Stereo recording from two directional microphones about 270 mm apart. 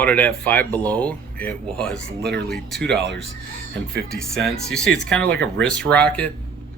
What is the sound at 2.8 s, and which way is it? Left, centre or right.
Speech, right.